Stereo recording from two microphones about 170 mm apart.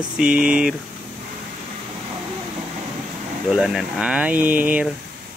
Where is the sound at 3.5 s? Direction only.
Centre (ahead or behind).